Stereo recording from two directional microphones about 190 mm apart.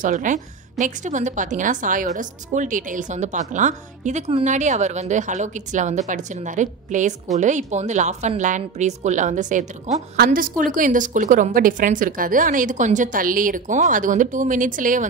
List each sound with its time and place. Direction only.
0.0 s a woman's voice: 40° right (ahead or behind)
10.1 s a woman's voice: 50° right (ahead or behind)